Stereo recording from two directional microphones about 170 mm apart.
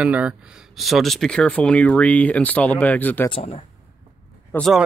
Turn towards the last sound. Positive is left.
turn(degrees=0)  # may be behind; listen again after turning